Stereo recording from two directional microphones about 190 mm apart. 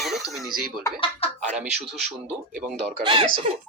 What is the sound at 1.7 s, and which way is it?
Speech, 35° right (ahead or behind).